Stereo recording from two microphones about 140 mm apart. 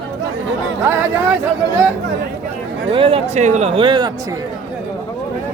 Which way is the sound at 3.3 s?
55° right (ahead or behind).